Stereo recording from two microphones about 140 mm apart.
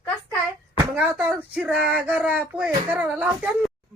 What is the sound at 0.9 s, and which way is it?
Speech, 10° right (ahead or behind).